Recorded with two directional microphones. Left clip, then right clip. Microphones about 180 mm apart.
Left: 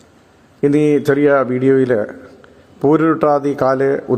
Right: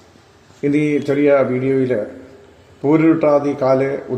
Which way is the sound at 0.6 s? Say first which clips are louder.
Left 4 dB; 20° left (ahead or behind).